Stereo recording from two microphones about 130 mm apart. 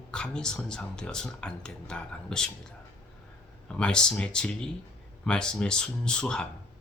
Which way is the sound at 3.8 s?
5° left (ahead or behind).